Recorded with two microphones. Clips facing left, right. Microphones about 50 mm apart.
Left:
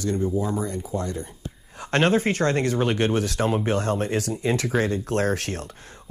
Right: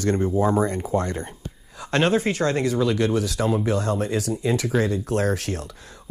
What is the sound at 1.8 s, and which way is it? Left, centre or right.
Speech, left.